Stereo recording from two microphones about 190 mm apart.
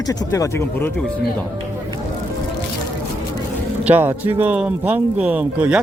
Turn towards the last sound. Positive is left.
turn(degrees=-5)  # may be behind; listen again after turning